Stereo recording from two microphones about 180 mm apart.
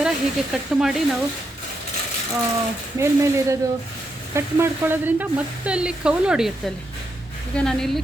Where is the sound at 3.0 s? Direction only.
15° right (ahead or behind).